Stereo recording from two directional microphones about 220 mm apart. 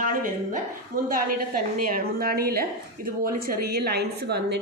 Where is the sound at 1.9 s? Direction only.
45° right (ahead or behind).